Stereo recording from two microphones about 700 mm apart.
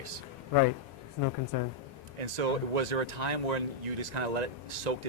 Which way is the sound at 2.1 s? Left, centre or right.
Right.